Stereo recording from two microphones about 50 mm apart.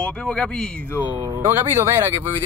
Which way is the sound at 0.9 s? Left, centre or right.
Right.